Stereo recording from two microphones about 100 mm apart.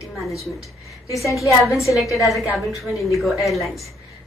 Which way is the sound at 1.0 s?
30° left (ahead or behind).